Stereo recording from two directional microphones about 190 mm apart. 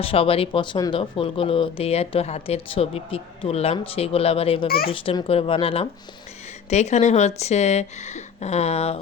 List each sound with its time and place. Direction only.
0.0 s speech: 30° left (ahead or behind)